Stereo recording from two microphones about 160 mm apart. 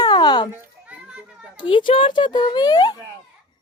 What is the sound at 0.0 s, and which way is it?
Children playing, 25° left (ahead or behind).